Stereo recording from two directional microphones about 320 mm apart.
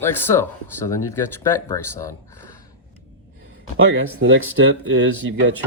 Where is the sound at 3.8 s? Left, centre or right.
Right.